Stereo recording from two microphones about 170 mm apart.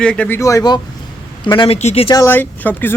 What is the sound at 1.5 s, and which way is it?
Speech, 30° left (ahead or behind).